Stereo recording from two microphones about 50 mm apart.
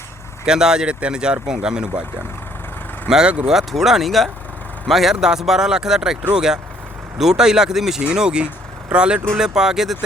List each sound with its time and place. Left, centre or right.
0.4 s speech: centre
3.1 s speech: centre
9.6 s speech: centre